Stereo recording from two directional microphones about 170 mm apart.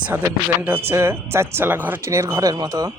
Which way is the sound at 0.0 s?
10° right (ahead or behind).